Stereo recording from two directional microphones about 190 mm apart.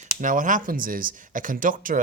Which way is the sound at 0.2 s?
45° right (ahead or behind).